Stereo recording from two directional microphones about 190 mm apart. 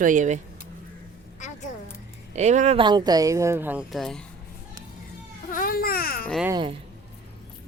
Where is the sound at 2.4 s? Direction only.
35° right (ahead or behind).